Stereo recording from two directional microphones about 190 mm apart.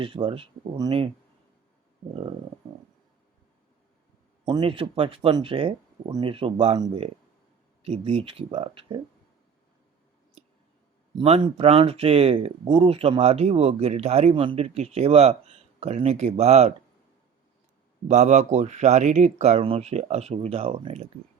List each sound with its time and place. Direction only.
0.0 s speech: 30° right (ahead or behind)
4.4 s speech: 25° right (ahead or behind)
11.1 s speech: 30° right (ahead or behind)
18.1 s speech: 40° right (ahead or behind)